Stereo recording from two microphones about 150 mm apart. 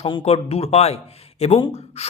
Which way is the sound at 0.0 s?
40° left (ahead or behind).